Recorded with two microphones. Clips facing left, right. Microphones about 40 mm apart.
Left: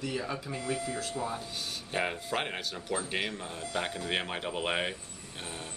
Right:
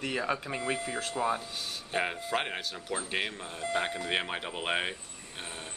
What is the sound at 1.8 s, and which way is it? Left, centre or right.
Speech, centre.